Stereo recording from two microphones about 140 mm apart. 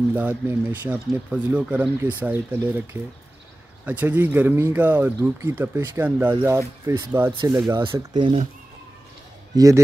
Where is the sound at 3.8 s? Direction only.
10° right (ahead or behind).